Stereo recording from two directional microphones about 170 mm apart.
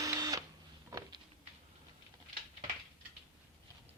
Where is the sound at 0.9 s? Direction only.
25° right (ahead or behind).